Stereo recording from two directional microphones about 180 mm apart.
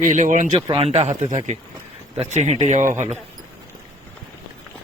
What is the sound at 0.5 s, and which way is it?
Speech, 30° right (ahead or behind).